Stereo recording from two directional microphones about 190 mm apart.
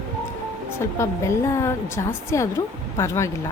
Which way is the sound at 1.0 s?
15° left (ahead or behind).